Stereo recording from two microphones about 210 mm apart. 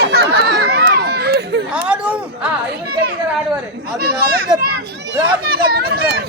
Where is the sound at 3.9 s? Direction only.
50° right (ahead or behind).